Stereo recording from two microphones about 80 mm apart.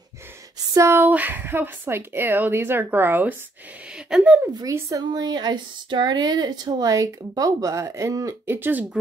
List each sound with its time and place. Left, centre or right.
0.7 s speech: right
1.0 s speech: right
3.9 s a sound: centre
4.6 s speech: right
5.1 s speech: right
8.5 s speech: right